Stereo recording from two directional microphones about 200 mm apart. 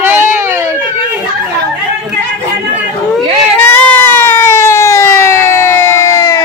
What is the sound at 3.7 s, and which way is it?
Siren, 10° left (ahead or behind).